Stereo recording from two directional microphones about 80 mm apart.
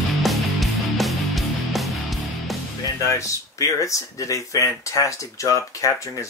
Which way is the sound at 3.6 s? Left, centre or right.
Left.